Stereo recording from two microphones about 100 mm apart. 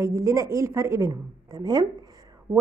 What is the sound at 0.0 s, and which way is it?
A woman's voice, 30° right (ahead or behind).